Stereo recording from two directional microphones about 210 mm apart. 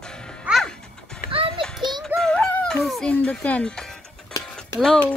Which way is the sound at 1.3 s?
25° right (ahead or behind).